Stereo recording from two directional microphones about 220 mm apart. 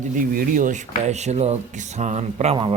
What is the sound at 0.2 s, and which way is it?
Speech, 35° right (ahead or behind).